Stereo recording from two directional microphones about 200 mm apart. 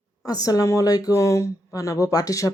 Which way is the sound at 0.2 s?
20° left (ahead or behind).